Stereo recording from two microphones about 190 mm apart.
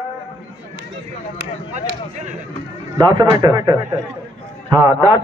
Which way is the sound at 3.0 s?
20° right (ahead or behind).